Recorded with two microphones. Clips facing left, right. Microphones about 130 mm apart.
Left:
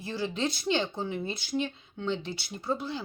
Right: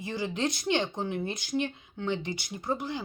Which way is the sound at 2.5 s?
15° right (ahead or behind).